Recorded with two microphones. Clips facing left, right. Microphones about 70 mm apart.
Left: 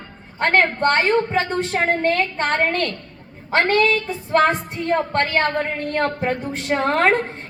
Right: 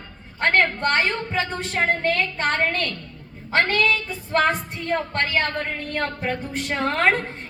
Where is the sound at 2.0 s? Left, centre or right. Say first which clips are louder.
Left 3 dB; left.